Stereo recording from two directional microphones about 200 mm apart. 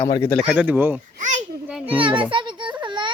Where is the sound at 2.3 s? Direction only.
25° right (ahead or behind).